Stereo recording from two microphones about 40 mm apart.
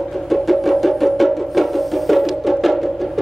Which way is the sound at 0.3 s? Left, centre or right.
Centre.